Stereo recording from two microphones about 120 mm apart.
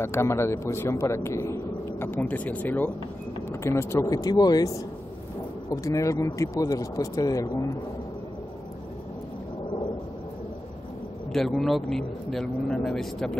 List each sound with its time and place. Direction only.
0.0 s a man's voice: 20° left (ahead or behind)
11.3 s speech: 5° left (ahead or behind)